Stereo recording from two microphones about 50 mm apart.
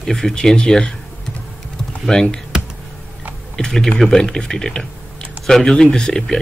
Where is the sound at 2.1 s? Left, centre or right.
Centre.